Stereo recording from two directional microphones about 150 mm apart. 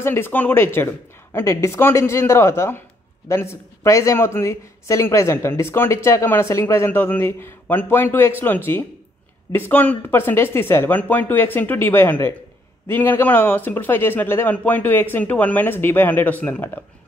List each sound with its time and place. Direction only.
0.0 s a man's voice: 15° left (ahead or behind)